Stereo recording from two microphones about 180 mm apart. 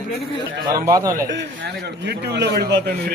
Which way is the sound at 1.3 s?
75° right (ahead or behind).